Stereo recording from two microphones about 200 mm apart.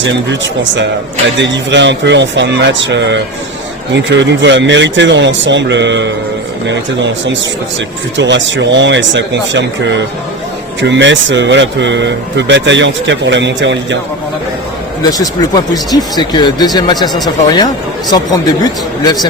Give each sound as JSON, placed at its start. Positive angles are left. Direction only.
{"t": 1.4, "sound": "speech", "side_deg": -65}
{"t": 15.0, "sound": "speech", "side_deg": 20}
{"t": 19.0, "sound": "speech", "side_deg": 20}